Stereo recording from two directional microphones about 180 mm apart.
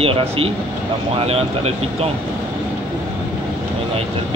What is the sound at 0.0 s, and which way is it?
Speech, 35° right (ahead or behind).